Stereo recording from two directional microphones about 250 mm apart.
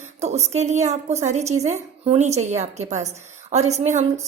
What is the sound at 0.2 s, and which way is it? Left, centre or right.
A woman's voice, right.